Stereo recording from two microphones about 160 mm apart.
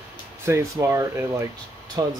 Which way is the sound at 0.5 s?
15° right (ahead or behind).